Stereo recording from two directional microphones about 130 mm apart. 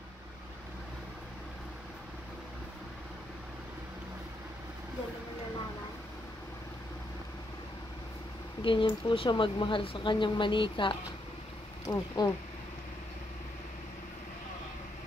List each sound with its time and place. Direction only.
8.6 s speech: 40° left (ahead or behind)
11.8 s speech: 25° left (ahead or behind)